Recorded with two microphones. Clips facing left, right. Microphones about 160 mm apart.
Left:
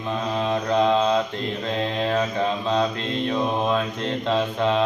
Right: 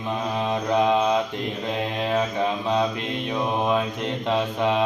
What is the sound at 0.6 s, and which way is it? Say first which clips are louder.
Mantra: even; 15° right (ahead or behind).